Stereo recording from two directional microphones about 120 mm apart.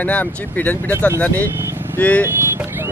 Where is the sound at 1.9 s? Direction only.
15° left (ahead or behind).